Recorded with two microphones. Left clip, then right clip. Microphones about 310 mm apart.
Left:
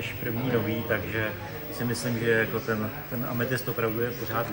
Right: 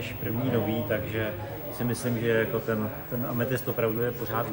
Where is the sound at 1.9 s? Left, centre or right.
Centre.